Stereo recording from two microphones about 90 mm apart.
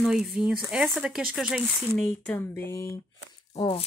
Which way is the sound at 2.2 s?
20° left (ahead or behind).